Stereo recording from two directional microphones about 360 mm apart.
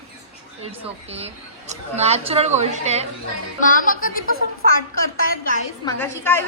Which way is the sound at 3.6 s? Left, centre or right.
Left.